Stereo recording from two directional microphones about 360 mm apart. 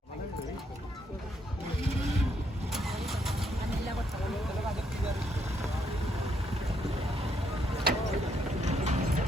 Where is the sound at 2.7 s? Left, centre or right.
Centre.